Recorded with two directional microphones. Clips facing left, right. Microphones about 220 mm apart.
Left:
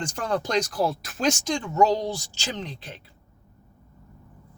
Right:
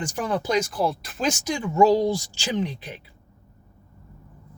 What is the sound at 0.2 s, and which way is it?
Speech, 5° right (ahead or behind).